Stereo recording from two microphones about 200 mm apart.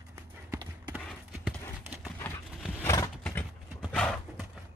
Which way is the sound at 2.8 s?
15° left (ahead or behind).